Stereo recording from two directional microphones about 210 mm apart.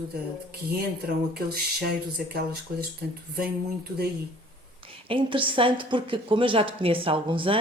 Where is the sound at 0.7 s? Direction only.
45° right (ahead or behind).